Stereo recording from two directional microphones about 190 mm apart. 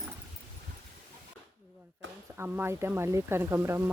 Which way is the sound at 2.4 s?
10° right (ahead or behind).